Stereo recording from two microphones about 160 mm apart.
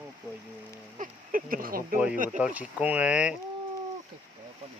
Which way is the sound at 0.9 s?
55° right (ahead or behind).